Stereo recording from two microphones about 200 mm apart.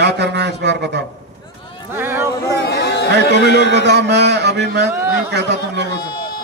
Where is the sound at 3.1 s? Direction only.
60° right (ahead or behind).